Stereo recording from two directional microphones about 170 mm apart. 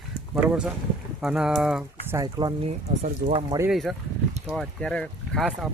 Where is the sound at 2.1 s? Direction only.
25° right (ahead or behind).